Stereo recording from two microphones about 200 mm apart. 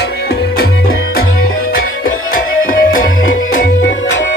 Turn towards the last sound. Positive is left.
turn(degrees=45)  # may be behind; listen again after turning